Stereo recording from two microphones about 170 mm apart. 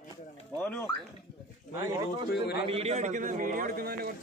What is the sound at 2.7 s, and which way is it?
A man's voice, 40° right (ahead or behind).